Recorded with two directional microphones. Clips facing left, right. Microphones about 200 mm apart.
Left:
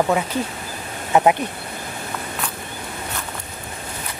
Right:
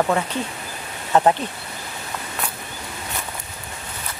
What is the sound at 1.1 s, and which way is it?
Speech, 10° left (ahead or behind).